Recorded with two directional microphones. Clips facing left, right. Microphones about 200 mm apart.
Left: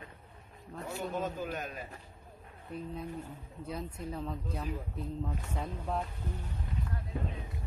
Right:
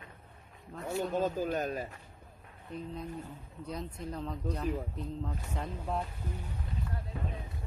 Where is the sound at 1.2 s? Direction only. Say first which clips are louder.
Right 5 dB; 35° right (ahead or behind).